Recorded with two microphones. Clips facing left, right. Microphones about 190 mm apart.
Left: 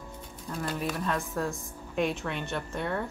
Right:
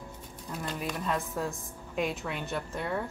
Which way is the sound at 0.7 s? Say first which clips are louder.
Left 2 dB; centre (ahead or behind).